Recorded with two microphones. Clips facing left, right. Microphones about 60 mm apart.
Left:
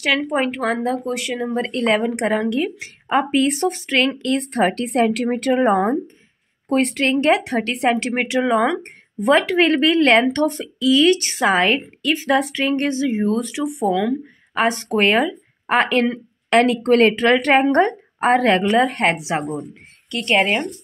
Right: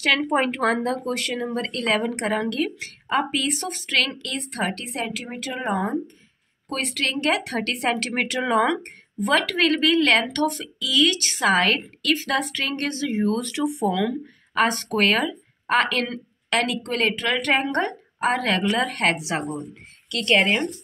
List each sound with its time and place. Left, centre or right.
0.0 s a woman's voice: centre; by 4.8 s left
4.8 s speech: left
5.6 s a woman's voice: left
8.4 s speech: centre
9.2 s speech: left
16.6 s a woman's voice: left; by 20.6 s centre